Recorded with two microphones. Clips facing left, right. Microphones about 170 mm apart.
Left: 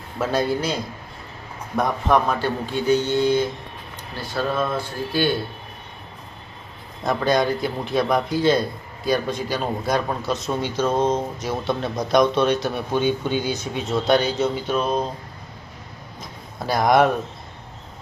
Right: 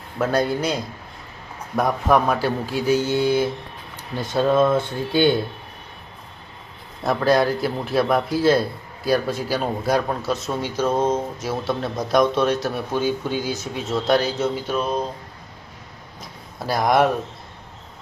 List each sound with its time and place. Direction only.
0.2 s speech: centre (ahead or behind)
4.2 s speech: 20° right (ahead or behind)
7.0 s speech: 5° right (ahead or behind)
16.6 s speech: centre (ahead or behind)